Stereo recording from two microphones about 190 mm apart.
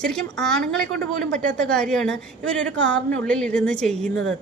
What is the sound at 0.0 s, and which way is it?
A woman's voice, 5° left (ahead or behind).